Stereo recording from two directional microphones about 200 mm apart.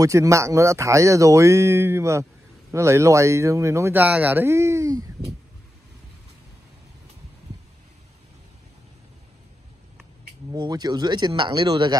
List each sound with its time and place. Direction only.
0.0 s speech: 15° right (ahead or behind)
10.5 s speech: 20° right (ahead or behind)